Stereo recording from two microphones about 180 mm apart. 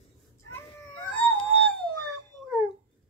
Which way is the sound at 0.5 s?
10° left (ahead or behind).